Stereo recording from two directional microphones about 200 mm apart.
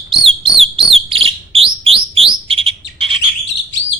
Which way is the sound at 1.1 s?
30° right (ahead or behind).